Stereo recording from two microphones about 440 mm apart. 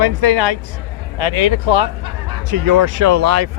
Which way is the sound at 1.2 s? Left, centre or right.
Right.